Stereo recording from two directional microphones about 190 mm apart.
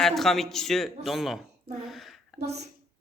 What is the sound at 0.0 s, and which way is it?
A man's voice, centre (ahead or behind).